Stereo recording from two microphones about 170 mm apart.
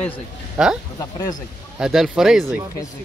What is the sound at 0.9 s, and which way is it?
Speech, 25° left (ahead or behind).